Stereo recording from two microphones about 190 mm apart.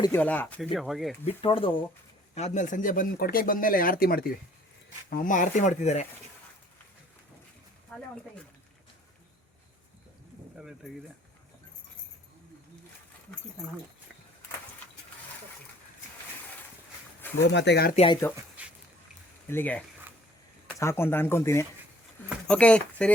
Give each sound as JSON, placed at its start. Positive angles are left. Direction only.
{"t": 0.0, "sound": "speech", "side_deg": 10}
{"t": 1.2, "sound": "speech", "side_deg": 30}
{"t": 7.9, "sound": "speech", "side_deg": 5}
{"t": 10.6, "sound": "speech", "side_deg": 0}
{"t": 17.4, "sound": "speech", "side_deg": 65}
{"t": 17.9, "sound": "speech", "side_deg": 30}
{"t": 18.6, "sound": "a sound", "side_deg": -5}
{"t": 19.5, "sound": "speech", "side_deg": 10}